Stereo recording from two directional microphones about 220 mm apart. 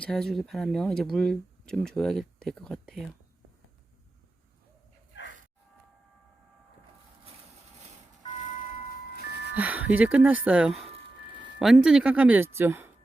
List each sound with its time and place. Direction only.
0.0 s speech: 5° left (ahead or behind)
5.1 s a sound: 55° left (ahead or behind)
9.6 s speech: 5° right (ahead or behind)